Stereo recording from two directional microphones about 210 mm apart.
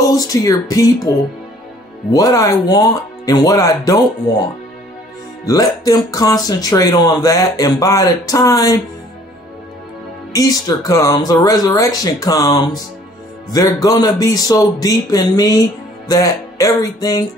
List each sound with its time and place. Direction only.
0.0 s speech: 15° left (ahead or behind)
10.3 s speech: 15° left (ahead or behind)